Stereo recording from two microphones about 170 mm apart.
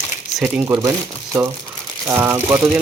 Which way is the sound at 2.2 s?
10° right (ahead or behind).